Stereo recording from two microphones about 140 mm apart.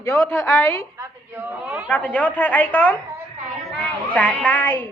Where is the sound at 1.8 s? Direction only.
10° left (ahead or behind).